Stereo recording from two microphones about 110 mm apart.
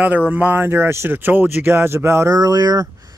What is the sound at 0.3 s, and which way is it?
Speech, 15° right (ahead or behind).